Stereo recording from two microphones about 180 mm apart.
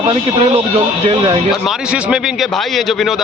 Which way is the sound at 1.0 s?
30° right (ahead or behind).